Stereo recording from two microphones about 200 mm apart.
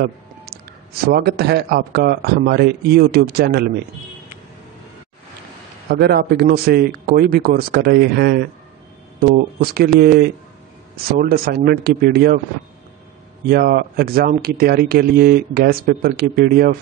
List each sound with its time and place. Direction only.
1.0 s speech: 55° right (ahead or behind)
5.9 s speech: 50° right (ahead or behind)
13.5 s speech: 50° right (ahead or behind)